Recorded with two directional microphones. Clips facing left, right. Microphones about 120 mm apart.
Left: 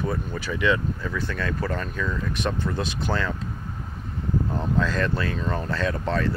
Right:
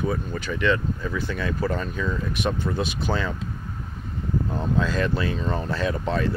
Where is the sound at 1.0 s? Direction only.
5° right (ahead or behind).